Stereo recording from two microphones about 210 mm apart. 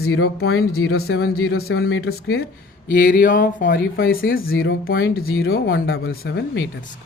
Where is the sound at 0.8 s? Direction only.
90° left.